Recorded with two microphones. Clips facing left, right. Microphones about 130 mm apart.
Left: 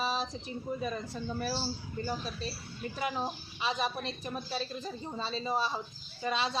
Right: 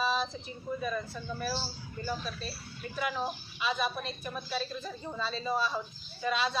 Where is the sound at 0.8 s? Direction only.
35° left (ahead or behind).